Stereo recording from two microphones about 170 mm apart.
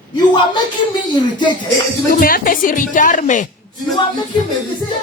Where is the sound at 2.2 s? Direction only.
55° left (ahead or behind).